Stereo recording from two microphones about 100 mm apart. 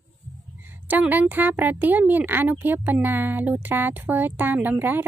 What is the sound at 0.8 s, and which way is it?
Speech, 20° right (ahead or behind).